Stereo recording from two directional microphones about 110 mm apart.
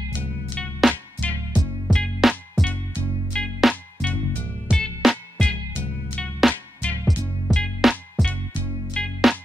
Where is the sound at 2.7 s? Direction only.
15° left (ahead or behind).